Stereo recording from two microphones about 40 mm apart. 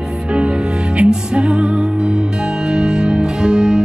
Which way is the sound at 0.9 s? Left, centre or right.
Right.